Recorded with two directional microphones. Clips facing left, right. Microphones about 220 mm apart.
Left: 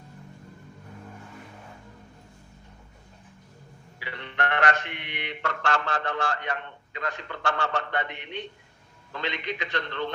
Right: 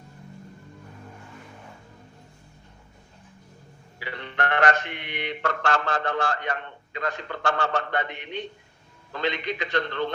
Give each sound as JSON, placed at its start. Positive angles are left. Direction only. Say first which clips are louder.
{"t": 4.0, "sound": "mantra", "louder": "right 2 dB", "side_deg": -40}
{"t": 9.1, "sound": "a man's voice", "louder": "right 4 dB", "side_deg": -40}